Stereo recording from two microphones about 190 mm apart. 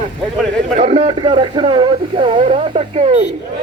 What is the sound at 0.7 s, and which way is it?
A man's voice, 35° right (ahead or behind).